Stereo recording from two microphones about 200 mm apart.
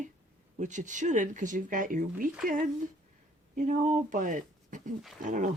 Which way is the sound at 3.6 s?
40° right (ahead or behind).